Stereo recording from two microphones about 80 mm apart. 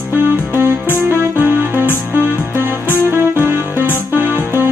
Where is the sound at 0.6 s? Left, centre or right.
Right.